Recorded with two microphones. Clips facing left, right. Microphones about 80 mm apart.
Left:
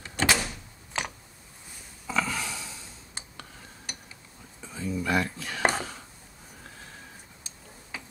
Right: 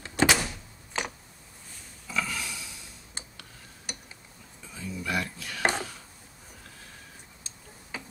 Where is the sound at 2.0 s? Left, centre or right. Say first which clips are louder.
Left 3 dB; left.